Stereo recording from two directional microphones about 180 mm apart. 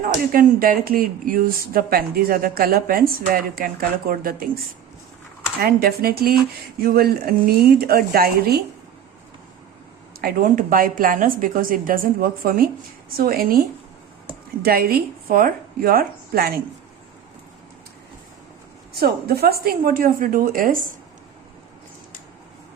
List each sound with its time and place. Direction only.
0.0 s speech: 55° right (ahead or behind)
5.5 s speech: 55° right (ahead or behind)
10.2 s a woman's voice: 55° right (ahead or behind)
18.9 s a woman's voice: 60° right (ahead or behind)